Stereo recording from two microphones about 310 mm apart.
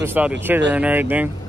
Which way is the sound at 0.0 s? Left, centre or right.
Centre.